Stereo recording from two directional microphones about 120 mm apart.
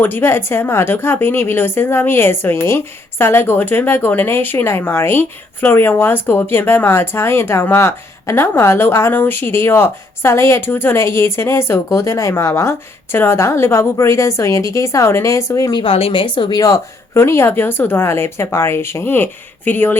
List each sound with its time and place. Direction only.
0.0 s a woman's voice: 20° left (ahead or behind)
15.7 s a woman's voice: 50° left (ahead or behind)
16.6 s a woman's voice: 30° left (ahead or behind)